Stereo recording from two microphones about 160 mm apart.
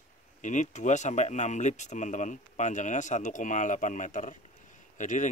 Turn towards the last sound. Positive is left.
turn(degrees=50)  # may be behind; listen again after turning